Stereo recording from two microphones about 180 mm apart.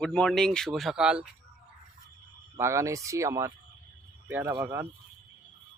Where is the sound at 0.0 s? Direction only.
5° left (ahead or behind).